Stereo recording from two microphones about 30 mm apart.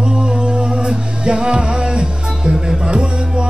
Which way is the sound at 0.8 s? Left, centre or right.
Right.